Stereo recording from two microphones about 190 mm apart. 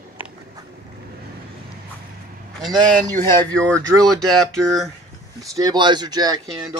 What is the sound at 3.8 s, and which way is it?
Speech, 20° right (ahead or behind).